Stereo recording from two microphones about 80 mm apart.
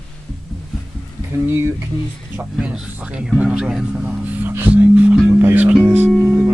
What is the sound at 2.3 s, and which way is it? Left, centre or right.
Speech, centre.